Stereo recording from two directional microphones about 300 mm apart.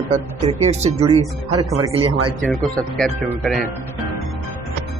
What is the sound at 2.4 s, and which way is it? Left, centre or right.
Speech, centre.